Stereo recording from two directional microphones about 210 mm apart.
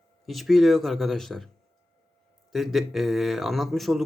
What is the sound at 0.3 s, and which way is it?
Speech, centre (ahead or behind).